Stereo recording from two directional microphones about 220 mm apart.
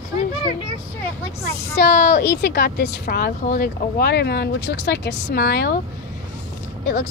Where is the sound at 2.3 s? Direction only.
50° left (ahead or behind).